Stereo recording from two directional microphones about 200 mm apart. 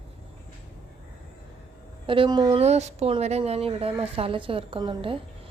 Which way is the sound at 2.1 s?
25° right (ahead or behind).